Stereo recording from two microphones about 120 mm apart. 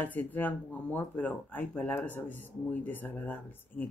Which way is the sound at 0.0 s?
15° left (ahead or behind).